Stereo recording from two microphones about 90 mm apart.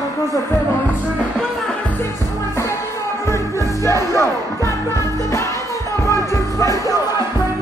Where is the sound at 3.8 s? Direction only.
35° left (ahead or behind).